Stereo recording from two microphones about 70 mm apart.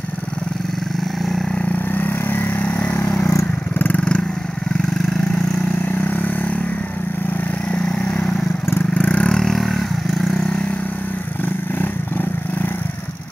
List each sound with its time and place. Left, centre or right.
2.0 s vehicle: left
5.9 s vehicle: left
8.9 s vehicle: left
9.3 s vehicle: centre